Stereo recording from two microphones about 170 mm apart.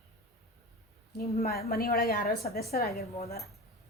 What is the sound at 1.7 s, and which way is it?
A woman's voice, 65° left (ahead or behind).